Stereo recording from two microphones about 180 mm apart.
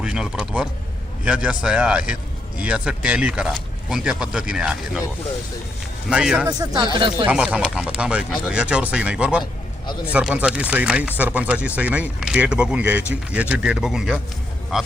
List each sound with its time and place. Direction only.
0.0 s speech: 5° right (ahead or behind)
6.1 s speech: 5° right (ahead or behind)
6.5 s speech: 20° right (ahead or behind)
7.3 s speech: 5° right (ahead or behind)